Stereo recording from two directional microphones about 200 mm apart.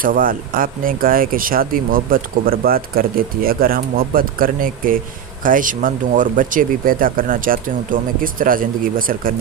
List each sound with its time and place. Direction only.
0.0 s speech: 45° right (ahead or behind)